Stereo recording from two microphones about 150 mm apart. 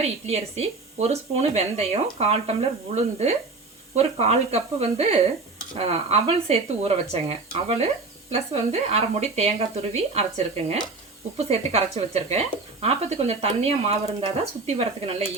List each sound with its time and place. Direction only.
0.0 s speech: 45° right (ahead or behind)